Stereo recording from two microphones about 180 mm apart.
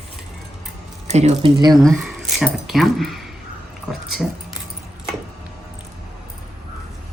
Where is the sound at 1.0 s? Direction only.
40° right (ahead or behind).